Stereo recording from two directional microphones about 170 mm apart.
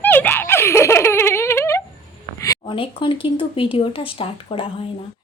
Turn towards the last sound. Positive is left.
turn(degrees=35)  # may be behind; listen again after turning